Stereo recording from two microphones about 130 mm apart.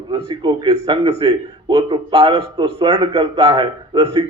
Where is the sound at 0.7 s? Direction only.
45° right (ahead or behind).